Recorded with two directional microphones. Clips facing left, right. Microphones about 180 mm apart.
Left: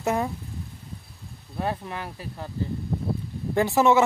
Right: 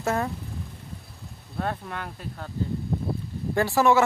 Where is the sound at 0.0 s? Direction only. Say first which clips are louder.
Left 1 dB; 15° left (ahead or behind).